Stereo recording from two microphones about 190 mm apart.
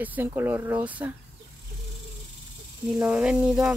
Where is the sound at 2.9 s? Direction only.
5° right (ahead or behind).